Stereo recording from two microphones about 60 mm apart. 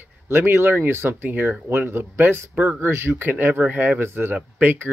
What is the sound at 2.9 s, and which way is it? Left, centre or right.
Speech, right.